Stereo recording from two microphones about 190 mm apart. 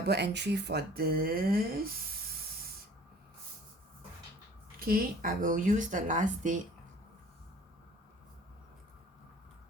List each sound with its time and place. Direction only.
0.0 s speech: 60° right (ahead or behind)
4.8 s speech: 50° right (ahead or behind)